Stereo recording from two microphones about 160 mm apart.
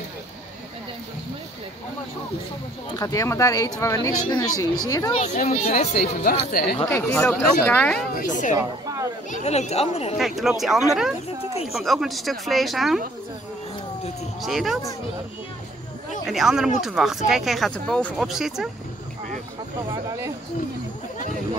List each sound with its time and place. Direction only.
3.0 s speech: 20° left (ahead or behind)
5.1 s speech: 45° left (ahead or behind)
6.2 s speech: 70° left (ahead or behind)
6.8 s speech: 15° left (ahead or behind)
8.2 s speech: 50° left (ahead or behind)
8.5 s speech: 20° right (ahead or behind)
9.3 s speech: 45° left (ahead or behind)
10.1 s a woman's voice: centre (ahead or behind)
11.6 s a woman's voice: centre (ahead or behind)
14.4 s a woman's voice: centre (ahead or behind)
16.3 s a woman's voice: 5° right (ahead or behind)
19.9 s speech: 20° right (ahead or behind)